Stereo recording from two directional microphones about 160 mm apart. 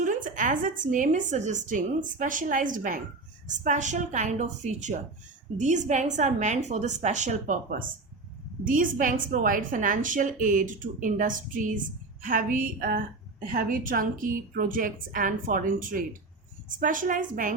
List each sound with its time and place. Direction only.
0.0 s a woman's voice: 55° right (ahead or behind)